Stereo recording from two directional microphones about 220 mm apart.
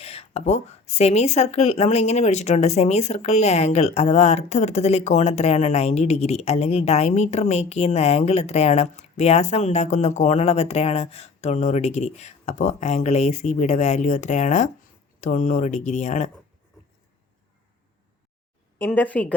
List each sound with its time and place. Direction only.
0.0 s speech: 25° left (ahead or behind)
18.8 s speech: 5° left (ahead or behind)